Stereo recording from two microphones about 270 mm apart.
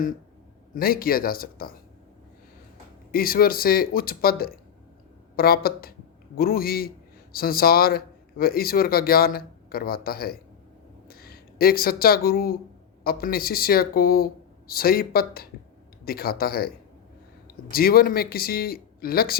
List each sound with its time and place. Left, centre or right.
0.7 s speech: left
3.1 s speech: left